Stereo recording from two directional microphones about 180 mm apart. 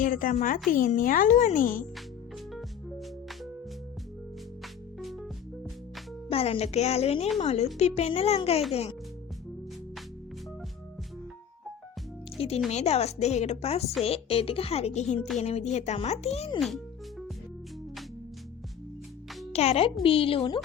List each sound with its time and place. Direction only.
0.0 s a child's voice: 45° left (ahead or behind)
2.5 s music: centre (ahead or behind)
4.6 s music: centre (ahead or behind)
6.3 s a woman's voice: 35° left (ahead or behind)
12.4 s a woman's voice: 30° left (ahead or behind)
16.6 s music: centre (ahead or behind)
19.5 s a woman's voice: 35° left (ahead or behind)